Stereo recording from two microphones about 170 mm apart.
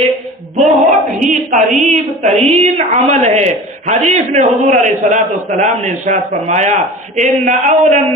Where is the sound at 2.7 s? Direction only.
45° right (ahead or behind).